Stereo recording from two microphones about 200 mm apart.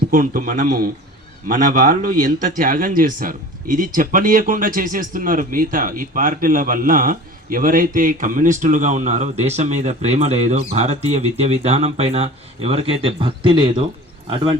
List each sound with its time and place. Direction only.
0.1 s speech: 45° right (ahead or behind); by 13.8 s 25° right (ahead or behind)